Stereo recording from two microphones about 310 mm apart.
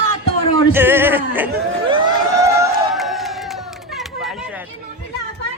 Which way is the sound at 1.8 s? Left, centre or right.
Centre.